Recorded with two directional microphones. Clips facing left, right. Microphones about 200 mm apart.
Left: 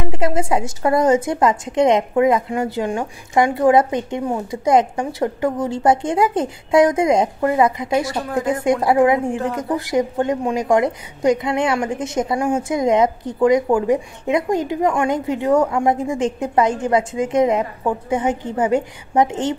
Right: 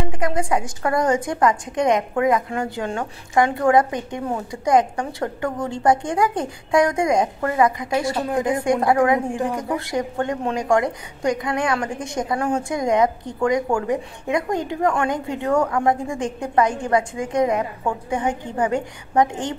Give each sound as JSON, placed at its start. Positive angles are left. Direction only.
{"t": 0.1, "sound": "a woman's voice", "side_deg": 25}
{"t": 8.3, "sound": "speech", "side_deg": -20}
{"t": 8.6, "sound": "a woman's voice", "side_deg": 20}